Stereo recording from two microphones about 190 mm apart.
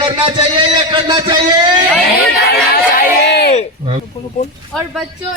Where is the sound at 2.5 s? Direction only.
55° left (ahead or behind).